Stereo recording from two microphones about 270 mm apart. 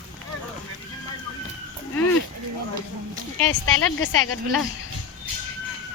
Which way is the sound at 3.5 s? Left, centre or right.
Left.